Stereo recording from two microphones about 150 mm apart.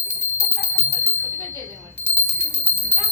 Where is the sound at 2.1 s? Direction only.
15° left (ahead or behind).